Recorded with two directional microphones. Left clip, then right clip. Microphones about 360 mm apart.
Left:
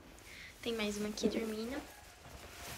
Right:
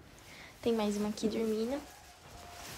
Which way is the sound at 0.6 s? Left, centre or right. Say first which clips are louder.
Right 6 dB; centre.